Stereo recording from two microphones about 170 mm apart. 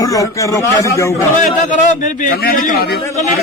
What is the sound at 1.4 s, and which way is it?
A man's voice, 50° left (ahead or behind).